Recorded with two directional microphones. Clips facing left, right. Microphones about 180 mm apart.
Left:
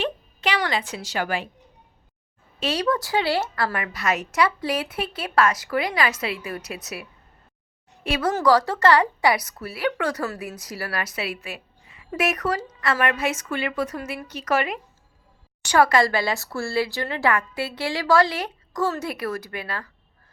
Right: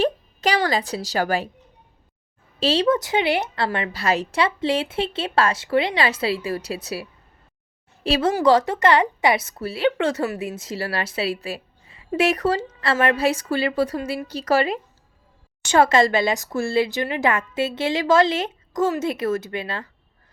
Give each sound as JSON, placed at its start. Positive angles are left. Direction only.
{"t": 0.0, "sound": "a sound", "side_deg": -40}
{"t": 2.6, "sound": "a woman's voice", "side_deg": -30}
{"t": 8.4, "sound": "a woman's voice", "side_deg": -20}